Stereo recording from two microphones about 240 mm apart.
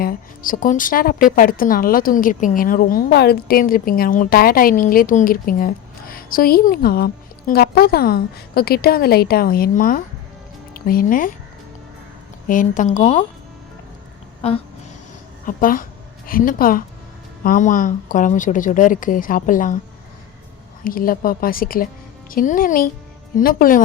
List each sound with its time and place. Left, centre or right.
0.0 s a woman's voice: left
12.5 s a woman's voice: left
14.4 s a woman's voice: left
20.8 s a woman's voice: left